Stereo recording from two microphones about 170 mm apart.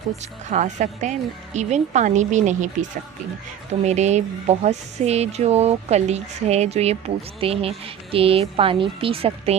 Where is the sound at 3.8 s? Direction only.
40° right (ahead or behind).